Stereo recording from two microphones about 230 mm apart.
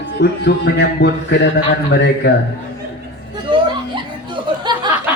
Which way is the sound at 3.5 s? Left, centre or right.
Right.